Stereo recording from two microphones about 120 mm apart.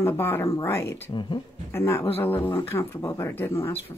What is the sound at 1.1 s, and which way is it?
Speech, 40° left (ahead or behind).